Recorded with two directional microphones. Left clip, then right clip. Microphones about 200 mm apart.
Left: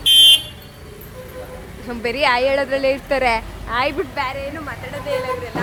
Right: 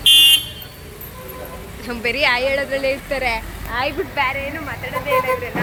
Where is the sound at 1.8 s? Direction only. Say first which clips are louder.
Even; 15° left (ahead or behind); by 4.0 s 35° left (ahead or behind).